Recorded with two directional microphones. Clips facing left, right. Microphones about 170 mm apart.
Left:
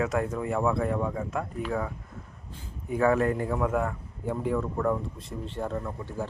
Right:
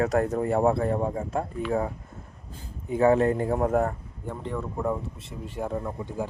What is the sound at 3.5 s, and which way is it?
Speech, 40° right (ahead or behind).